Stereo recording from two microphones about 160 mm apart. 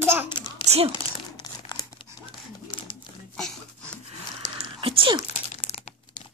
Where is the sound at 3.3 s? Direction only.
5° left (ahead or behind).